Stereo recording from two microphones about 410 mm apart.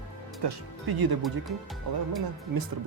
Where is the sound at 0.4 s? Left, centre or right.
Right.